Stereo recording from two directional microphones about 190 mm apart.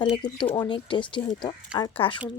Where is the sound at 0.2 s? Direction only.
25° left (ahead or behind).